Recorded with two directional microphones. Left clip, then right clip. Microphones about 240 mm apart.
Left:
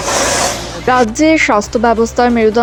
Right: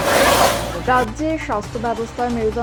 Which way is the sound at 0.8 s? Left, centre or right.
Left.